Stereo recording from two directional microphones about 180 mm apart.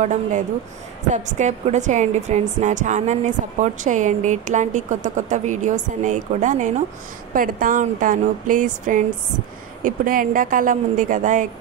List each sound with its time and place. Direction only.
0.0 s a woman's voice: 40° right (ahead or behind)